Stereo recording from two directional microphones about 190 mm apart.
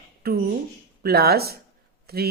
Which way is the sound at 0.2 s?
55° right (ahead or behind).